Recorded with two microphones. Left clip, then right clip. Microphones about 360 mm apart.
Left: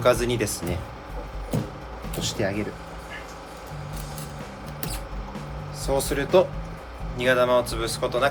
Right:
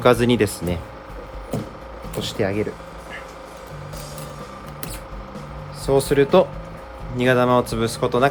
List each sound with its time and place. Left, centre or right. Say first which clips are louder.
0.0 s speech: right 5 dB; right
2.2 s speech: right 4 dB; right
5.8 s speech: right 8 dB; right